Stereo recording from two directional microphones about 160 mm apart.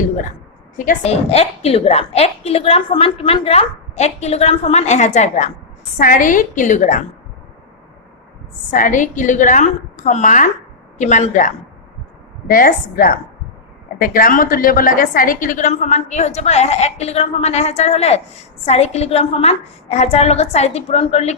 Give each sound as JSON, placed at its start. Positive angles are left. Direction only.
{"t": 0.8, "sound": "a woman's voice", "side_deg": 55}
{"t": 1.1, "sound": "a woman's voice", "side_deg": 40}
{"t": 6.0, "sound": "a woman's voice", "side_deg": 60}
{"t": 8.7, "sound": "a woman's voice", "side_deg": 55}
{"t": 12.5, "sound": "a woman's voice", "side_deg": 60}